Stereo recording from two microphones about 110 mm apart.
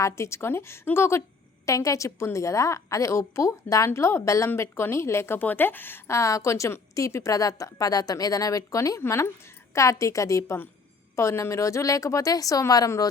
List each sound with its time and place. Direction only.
0.0 s a woman's voice: 25° left (ahead or behind)